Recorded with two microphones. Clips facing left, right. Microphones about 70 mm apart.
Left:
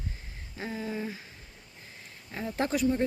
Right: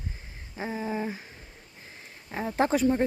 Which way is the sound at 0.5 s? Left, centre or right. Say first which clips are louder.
Right 4 dB; right.